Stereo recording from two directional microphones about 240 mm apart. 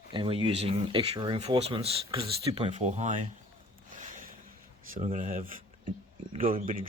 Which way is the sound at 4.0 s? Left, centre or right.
Right.